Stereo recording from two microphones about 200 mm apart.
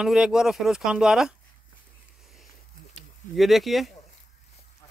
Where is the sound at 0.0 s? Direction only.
5° right (ahead or behind).